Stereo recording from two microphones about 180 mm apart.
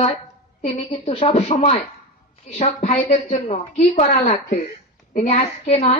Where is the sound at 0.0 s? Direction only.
35° left (ahead or behind).